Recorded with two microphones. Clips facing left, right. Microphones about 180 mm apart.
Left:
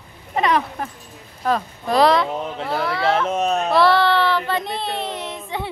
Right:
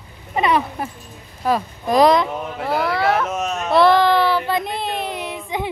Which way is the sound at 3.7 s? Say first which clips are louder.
Right 3 dB; 15° right (ahead or behind).